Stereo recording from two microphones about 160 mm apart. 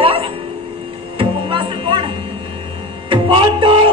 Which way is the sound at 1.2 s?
35° right (ahead or behind).